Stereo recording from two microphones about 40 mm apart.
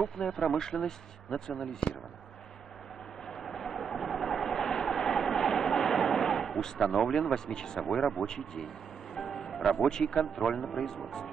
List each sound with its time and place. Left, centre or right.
0.2 s speech: left
3.3 s vehicle: centre
7.3 s speech: centre
7.8 s speech: centre
9.1 s music: centre
9.6 s speech: centre
9.8 s speech: centre